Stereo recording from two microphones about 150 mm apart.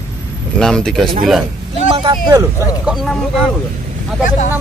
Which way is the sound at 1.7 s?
35° right (ahead or behind).